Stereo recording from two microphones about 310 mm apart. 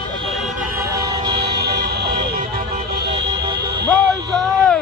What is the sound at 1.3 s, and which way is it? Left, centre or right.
Vehicle, right.